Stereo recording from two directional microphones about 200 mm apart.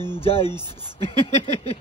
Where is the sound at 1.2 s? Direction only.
30° left (ahead or behind).